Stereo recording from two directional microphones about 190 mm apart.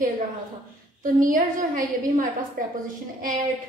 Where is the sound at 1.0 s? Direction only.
45° right (ahead or behind).